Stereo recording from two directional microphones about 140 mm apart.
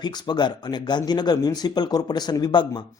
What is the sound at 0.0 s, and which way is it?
Speech, 30° left (ahead or behind).